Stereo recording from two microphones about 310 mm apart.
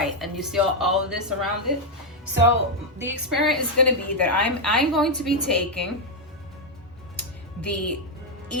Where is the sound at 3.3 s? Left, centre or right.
Centre.